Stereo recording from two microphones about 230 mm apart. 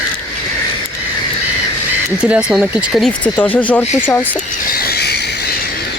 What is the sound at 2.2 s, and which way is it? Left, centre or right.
Speech, centre.